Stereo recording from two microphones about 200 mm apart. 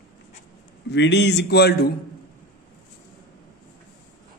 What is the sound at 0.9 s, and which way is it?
A man's voice, 60° left (ahead or behind).